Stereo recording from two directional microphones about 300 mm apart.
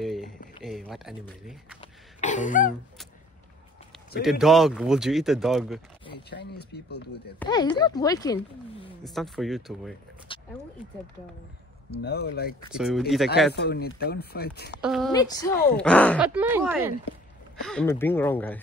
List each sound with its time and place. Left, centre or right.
0.0 s a sound: centre
0.7 s speech: centre
1.8 s throat clearing: left
4.2 s speech: centre
6.3 s speech: left
7.3 s speech: centre
9.0 s speech: centre
10.3 s a sound: centre
12.0 s speech: left
12.7 s speech: centre
13.6 s speech: left
14.8 s speech: centre
15.1 s speech: centre
17.6 s speech: centre